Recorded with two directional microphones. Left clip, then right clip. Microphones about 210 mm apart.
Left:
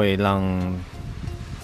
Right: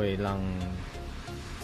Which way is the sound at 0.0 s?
25° left (ahead or behind).